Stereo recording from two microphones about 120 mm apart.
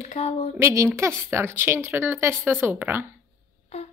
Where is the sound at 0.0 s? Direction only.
65° left (ahead or behind).